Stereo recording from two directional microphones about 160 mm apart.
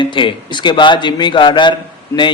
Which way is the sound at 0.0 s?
30° left (ahead or behind).